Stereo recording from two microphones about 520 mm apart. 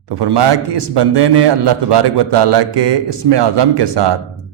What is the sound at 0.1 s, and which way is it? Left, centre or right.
Speech, right.